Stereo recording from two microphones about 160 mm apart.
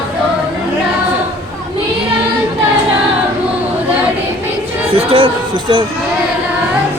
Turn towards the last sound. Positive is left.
turn(degrees=-30)  # may be behind; listen again after turning